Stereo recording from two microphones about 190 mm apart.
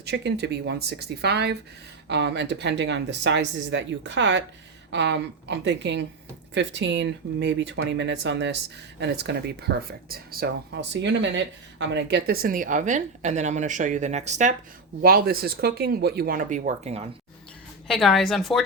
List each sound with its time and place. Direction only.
0.0 s speech: 60° right (ahead or behind); by 14.5 s 40° right (ahead or behind)
15.0 s speech: 50° right (ahead or behind); by 17.1 s 35° right (ahead or behind)
17.8 s a woman's voice: centre (ahead or behind)